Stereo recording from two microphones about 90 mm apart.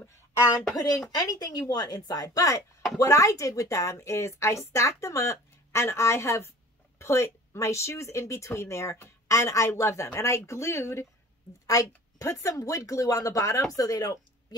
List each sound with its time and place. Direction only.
1.1 s speech: 45° left (ahead or behind)